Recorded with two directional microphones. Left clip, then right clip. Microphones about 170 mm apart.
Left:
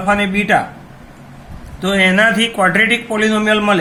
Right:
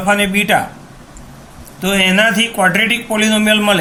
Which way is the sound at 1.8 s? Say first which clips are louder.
Even; 20° right (ahead or behind).